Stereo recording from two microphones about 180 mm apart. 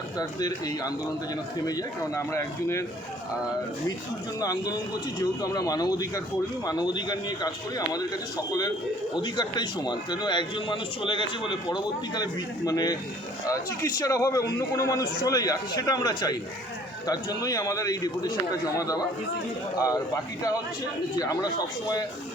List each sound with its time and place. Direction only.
0.2 s a man's voice: 20° left (ahead or behind)
4.4 s a man's voice: 20° left (ahead or behind)
21.2 s a man's voice: 20° left (ahead or behind)